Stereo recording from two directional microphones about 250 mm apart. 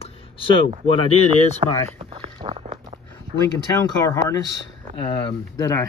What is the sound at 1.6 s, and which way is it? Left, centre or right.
Speech, right.